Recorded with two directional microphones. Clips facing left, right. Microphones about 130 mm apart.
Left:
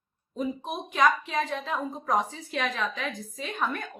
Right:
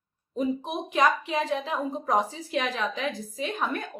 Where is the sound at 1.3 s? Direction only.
5° right (ahead or behind).